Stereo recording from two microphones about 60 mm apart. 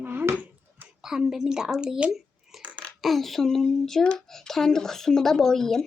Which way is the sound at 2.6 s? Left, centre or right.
Left.